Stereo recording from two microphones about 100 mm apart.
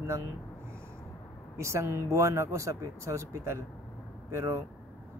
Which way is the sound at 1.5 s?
30° right (ahead or behind).